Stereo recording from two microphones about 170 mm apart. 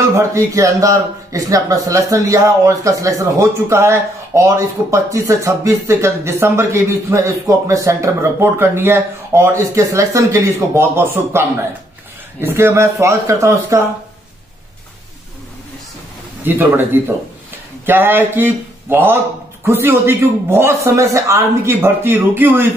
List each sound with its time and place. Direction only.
0.1 s a man's voice: 15° right (ahead or behind)
16.4 s a man's voice: 10° right (ahead or behind)